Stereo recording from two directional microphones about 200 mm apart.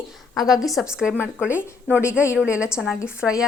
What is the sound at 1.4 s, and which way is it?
Speech, 10° left (ahead or behind).